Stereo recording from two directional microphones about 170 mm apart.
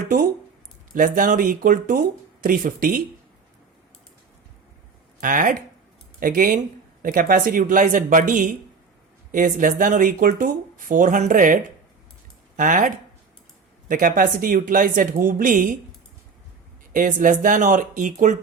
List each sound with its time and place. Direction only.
0.9 s speech: 50° right (ahead or behind)
5.2 s speech: 50° right (ahead or behind)
16.9 s speech: 50° right (ahead or behind)